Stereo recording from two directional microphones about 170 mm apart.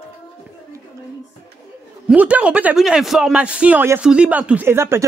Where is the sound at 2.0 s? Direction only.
5° right (ahead or behind).